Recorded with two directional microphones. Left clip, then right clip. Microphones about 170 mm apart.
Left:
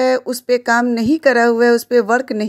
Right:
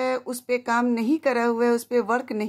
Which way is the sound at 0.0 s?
35° left (ahead or behind).